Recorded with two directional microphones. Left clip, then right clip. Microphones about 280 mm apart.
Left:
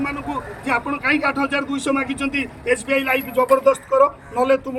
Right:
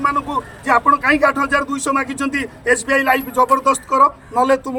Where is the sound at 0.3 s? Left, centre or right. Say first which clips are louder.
Right 5 dB; right.